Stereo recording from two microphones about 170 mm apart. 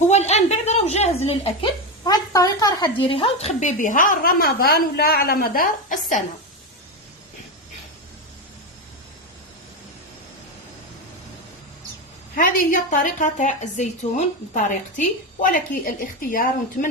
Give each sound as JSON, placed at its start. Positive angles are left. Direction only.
{"t": 0.1, "sound": "a sound", "side_deg": 40}
{"t": 2.0, "sound": "a woman's voice", "side_deg": 20}
{"t": 12.4, "sound": "a woman's voice", "side_deg": 50}